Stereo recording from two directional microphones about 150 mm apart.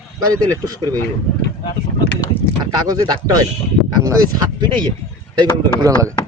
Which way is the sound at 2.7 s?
25° right (ahead or behind).